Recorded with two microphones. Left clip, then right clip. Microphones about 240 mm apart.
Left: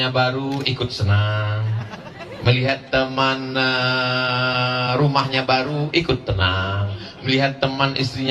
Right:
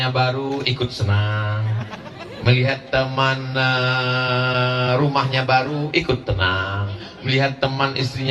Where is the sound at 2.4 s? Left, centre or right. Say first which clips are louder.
Even; left.